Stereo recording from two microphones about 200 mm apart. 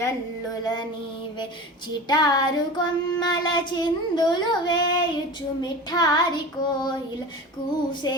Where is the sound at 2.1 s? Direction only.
20° left (ahead or behind).